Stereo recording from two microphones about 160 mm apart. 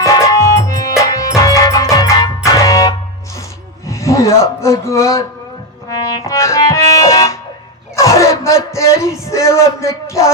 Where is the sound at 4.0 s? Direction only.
20° left (ahead or behind).